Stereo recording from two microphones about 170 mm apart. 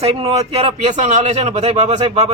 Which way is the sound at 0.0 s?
35° right (ahead or behind).